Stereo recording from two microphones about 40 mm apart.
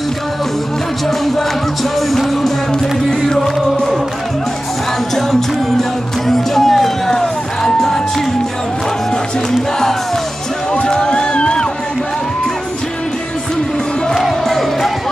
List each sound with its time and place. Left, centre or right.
2.0 s music: centre
5.1 s music: centre
9.5 s music: centre
10.7 s a sound: centre